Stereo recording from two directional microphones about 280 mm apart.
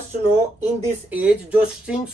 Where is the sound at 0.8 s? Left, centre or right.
Centre.